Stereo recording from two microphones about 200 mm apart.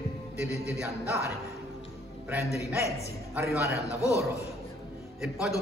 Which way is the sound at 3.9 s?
15° left (ahead or behind).